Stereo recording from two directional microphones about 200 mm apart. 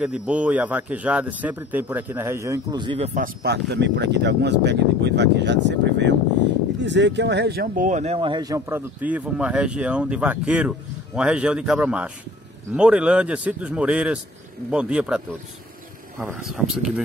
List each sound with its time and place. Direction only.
0.0 s speech: 5° right (ahead or behind); by 3.1 s 25° right (ahead or behind)
3.4 s a man's voice: 55° right (ahead or behind); by 17.0 s 5° right (ahead or behind)